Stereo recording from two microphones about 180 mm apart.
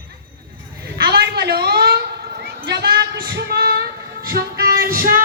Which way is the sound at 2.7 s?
65° right (ahead or behind).